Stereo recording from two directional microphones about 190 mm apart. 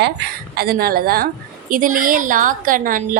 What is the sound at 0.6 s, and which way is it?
A woman's voice, 50° right (ahead or behind).